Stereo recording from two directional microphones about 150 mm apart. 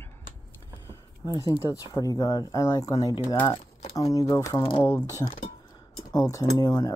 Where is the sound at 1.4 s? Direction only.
20° left (ahead or behind).